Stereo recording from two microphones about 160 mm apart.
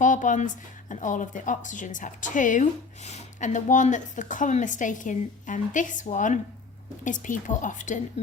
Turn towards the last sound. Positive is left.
turn(degrees=50)  # may be behind; listen again after turning